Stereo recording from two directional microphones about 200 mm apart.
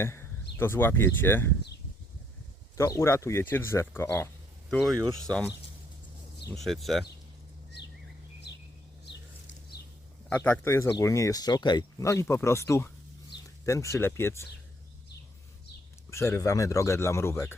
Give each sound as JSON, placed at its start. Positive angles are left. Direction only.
{"t": 0.0, "sound": "a sound", "side_deg": 15}
{"t": 0.5, "sound": "speech", "side_deg": 10}
{"t": 2.7, "sound": "speech", "side_deg": 15}
{"t": 4.7, "sound": "speech", "side_deg": 0}
{"t": 6.5, "sound": "speech", "side_deg": 0}
{"t": 9.0, "sound": "a sound", "side_deg": 60}
{"t": 10.2, "sound": "speech", "side_deg": 10}
{"t": 16.0, "sound": "speech", "side_deg": 15}